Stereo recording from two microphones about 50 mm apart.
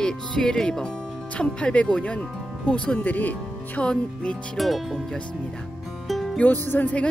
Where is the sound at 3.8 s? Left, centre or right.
Left.